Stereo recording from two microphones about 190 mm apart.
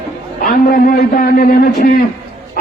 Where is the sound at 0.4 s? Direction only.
50° left (ahead or behind).